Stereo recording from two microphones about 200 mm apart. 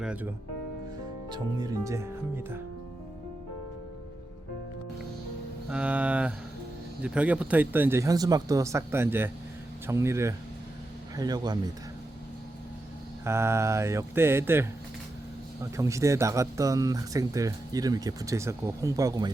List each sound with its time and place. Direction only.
0.0 s speech: 5° right (ahead or behind)
1.3 s speech: 15° right (ahead or behind)
5.6 s speech: 5° right (ahead or behind)
13.2 s speech: 15° right (ahead or behind)